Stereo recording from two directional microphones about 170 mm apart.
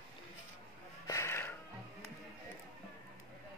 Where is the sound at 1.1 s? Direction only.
15° left (ahead or behind).